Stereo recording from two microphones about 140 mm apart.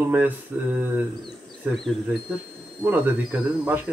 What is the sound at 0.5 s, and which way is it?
Speech, 10° right (ahead or behind).